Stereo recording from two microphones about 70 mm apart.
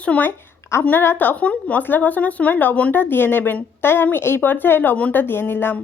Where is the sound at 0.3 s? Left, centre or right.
Left.